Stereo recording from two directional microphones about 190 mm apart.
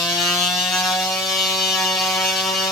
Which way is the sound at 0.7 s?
Centre (ahead or behind).